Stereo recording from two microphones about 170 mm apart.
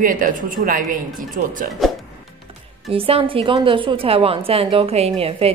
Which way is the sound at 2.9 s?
35° right (ahead or behind).